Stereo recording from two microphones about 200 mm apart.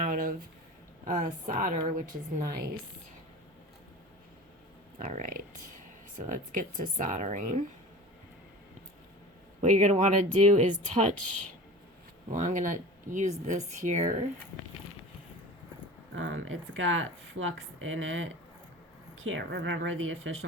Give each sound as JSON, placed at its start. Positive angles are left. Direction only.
{"t": 0.0, "sound": "a sound", "side_deg": -45}
{"t": 1.0, "sound": "a woman's voice", "side_deg": -40}
{"t": 4.9, "sound": "a woman's voice", "side_deg": -40}
{"t": 9.6, "sound": "a woman's voice", "side_deg": -40}
{"t": 12.3, "sound": "a woman's voice", "side_deg": -40}
{"t": 16.1, "sound": "speech", "side_deg": -70}